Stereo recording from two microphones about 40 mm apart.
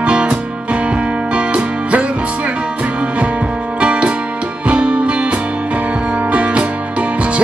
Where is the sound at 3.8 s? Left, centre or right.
Right.